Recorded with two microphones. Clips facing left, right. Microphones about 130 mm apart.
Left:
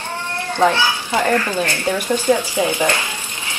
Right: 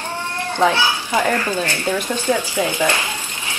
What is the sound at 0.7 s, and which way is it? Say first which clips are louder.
Speech: left 1 dB; 15° right (ahead or behind).